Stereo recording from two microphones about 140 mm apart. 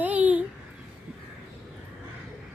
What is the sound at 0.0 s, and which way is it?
Babbling, 10° right (ahead or behind).